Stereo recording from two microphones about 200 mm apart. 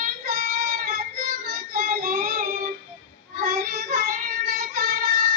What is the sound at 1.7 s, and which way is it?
Child singing, 45° right (ahead or behind).